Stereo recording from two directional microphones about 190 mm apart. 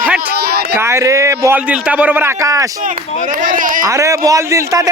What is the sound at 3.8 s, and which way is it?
A man's voice, 15° right (ahead or behind).